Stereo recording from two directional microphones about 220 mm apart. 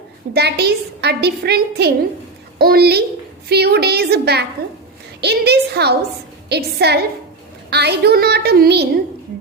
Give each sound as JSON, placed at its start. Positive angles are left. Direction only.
{"t": 0.3, "sound": "a woman's voice", "side_deg": -45}